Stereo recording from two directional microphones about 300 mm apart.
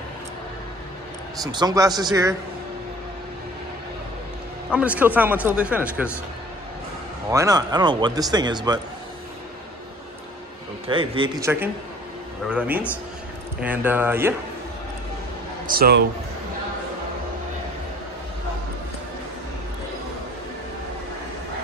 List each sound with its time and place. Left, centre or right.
1.4 s speech: centre
4.6 s speech: centre
7.2 s speech: centre
10.9 s speech: centre
15.7 s a man's voice: right